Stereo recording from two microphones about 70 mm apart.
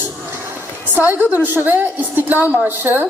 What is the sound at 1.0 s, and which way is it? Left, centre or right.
A man's voice, right.